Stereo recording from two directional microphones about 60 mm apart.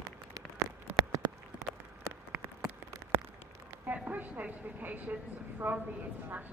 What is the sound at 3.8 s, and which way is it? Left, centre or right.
A woman's voice, right.